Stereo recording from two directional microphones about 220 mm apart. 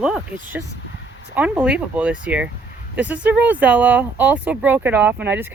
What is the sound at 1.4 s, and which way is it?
Speech, 5° right (ahead or behind).